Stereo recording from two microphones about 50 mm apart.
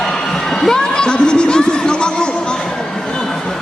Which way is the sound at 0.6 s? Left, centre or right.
Centre.